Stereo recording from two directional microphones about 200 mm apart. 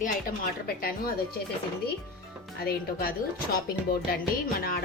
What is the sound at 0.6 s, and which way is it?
Music, 45° left (ahead or behind).